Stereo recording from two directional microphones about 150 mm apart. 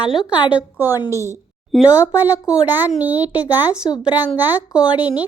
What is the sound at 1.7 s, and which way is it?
Speech, centre (ahead or behind).